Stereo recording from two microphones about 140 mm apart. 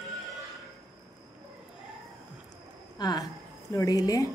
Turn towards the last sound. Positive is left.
turn(degrees=25)  # may be behind; listen again after turning